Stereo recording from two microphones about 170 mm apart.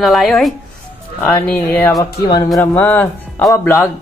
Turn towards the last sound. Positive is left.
turn(degrees=15)  # may be behind; listen again after turning